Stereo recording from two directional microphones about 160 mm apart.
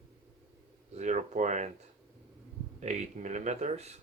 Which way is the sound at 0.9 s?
45° right (ahead or behind).